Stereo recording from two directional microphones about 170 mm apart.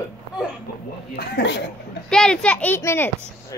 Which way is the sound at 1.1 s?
75° left (ahead or behind).